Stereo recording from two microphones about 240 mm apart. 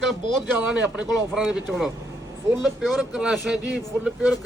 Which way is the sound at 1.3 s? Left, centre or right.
Centre.